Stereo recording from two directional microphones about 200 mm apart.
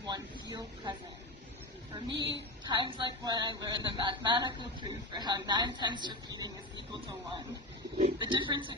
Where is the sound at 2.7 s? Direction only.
20° right (ahead or behind).